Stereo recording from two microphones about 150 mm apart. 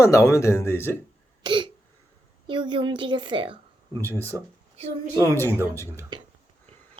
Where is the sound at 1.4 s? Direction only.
35° right (ahead or behind).